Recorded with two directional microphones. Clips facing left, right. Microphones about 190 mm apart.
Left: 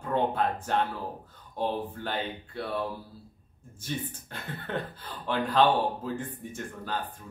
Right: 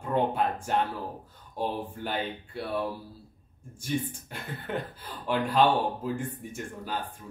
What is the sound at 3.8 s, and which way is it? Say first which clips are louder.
Speech: right 4 dB; 10° right (ahead or behind).